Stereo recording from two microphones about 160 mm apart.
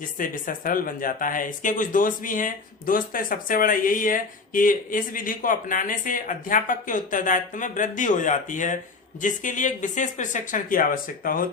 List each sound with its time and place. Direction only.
0.2 s speech: 60° left (ahead or behind)